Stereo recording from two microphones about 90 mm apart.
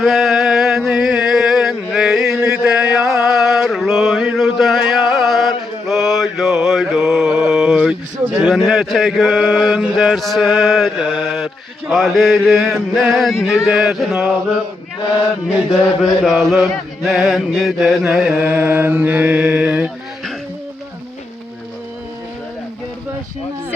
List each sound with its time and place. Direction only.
0.0 s a sound: centre (ahead or behind)
4.8 s mantra: 5° right (ahead or behind)
8.4 s a sound: centre (ahead or behind)
13.0 s chant: centre (ahead or behind)
16.2 s chant: centre (ahead or behind)
18.3 s mantra: 20° right (ahead or behind)